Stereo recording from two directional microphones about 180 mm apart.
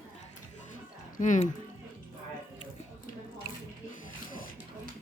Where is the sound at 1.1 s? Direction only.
45° left (ahead or behind).